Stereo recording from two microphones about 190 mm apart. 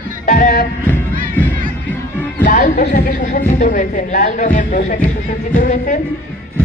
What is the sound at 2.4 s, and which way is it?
Speech, 40° left (ahead or behind).